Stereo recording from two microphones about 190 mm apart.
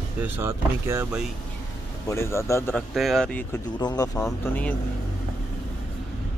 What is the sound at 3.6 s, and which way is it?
Speech, 20° left (ahead or behind).